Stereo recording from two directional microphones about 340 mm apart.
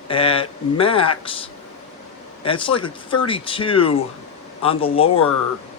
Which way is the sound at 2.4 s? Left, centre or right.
Centre.